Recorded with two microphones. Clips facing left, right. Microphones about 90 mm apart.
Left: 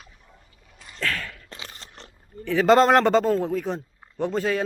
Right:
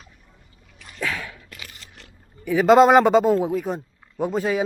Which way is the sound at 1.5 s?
30° left (ahead or behind).